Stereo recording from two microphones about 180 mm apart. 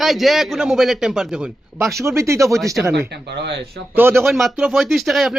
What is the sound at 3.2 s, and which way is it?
Speech, 70° right (ahead or behind).